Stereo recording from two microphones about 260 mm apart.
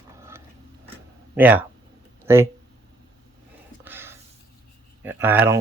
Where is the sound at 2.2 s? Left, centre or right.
Centre.